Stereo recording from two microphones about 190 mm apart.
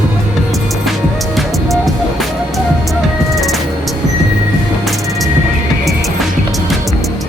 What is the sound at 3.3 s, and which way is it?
Music, centre (ahead or behind).